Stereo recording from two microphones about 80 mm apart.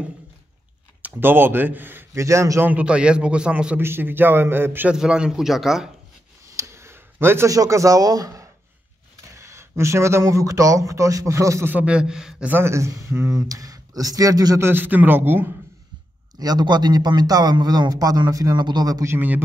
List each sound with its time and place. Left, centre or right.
1.0 s speech: right
2.1 s speech: right
2.6 s a man's voice: centre
3.8 s a man's voice: right
4.9 s a man's voice: centre
6.5 s a sound: right
7.4 s speech: right
9.4 s speech: right
11.6 s a man's voice: right
11.9 s a man's voice: centre
12.4 s speech: right
14.6 s a man's voice: right
16.3 s a man's voice: right
19.0 s a man's voice: right